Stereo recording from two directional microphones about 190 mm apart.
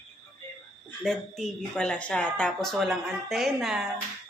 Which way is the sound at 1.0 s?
Centre (ahead or behind).